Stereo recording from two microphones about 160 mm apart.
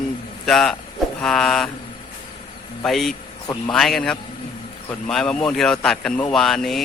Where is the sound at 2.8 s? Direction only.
Centre (ahead or behind).